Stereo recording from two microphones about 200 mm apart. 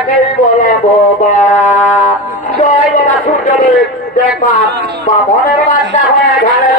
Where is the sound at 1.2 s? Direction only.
40° left (ahead or behind).